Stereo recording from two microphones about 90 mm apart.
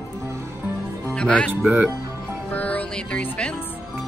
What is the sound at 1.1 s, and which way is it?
Speech, 10° left (ahead or behind).